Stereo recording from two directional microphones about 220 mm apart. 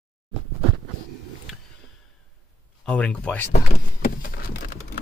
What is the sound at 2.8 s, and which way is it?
Speech, 5° left (ahead or behind).